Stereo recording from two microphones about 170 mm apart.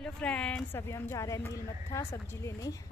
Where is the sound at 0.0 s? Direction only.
5° left (ahead or behind).